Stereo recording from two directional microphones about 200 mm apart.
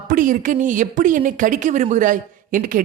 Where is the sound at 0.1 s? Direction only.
40° right (ahead or behind).